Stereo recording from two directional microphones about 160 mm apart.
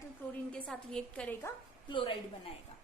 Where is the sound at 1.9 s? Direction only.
30° left (ahead or behind).